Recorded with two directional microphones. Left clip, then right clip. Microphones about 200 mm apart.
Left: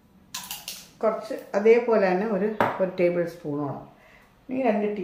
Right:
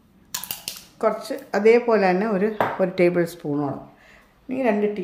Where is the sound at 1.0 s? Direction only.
50° right (ahead or behind).